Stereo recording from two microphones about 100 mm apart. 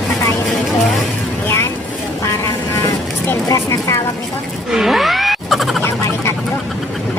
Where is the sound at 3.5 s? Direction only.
35° left (ahead or behind).